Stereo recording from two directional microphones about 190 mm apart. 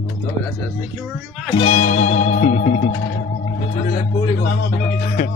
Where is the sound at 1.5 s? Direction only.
30° left (ahead or behind).